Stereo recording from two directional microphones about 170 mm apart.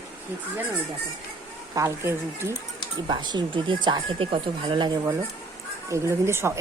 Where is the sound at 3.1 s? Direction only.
25° right (ahead or behind).